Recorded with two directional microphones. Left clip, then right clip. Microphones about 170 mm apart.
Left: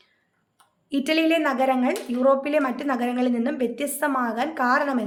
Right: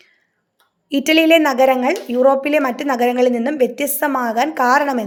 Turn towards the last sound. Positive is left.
turn(degrees=-40)  # may be behind; listen again after turning